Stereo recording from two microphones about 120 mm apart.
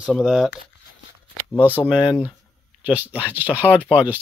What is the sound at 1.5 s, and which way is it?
Speech, 15° left (ahead or behind).